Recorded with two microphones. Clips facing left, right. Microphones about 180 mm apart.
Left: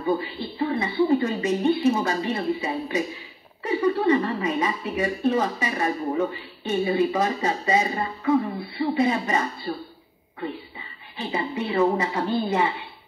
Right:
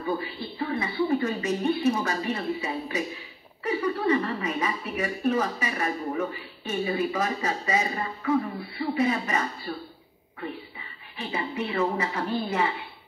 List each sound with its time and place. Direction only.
0.0 s a woman's voice: 25° left (ahead or behind)